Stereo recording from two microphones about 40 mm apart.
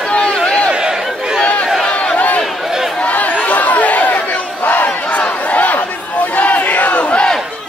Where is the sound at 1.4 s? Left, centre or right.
Left.